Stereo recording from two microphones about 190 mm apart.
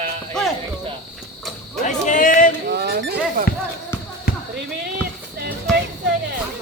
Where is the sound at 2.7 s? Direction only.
55° right (ahead or behind).